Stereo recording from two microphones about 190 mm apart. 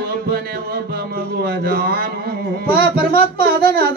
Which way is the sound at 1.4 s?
55° right (ahead or behind).